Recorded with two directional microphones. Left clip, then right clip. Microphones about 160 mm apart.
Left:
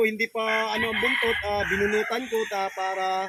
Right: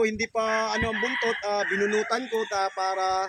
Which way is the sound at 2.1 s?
15° right (ahead or behind).